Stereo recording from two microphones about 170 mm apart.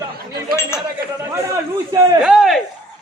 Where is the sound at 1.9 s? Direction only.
25° right (ahead or behind).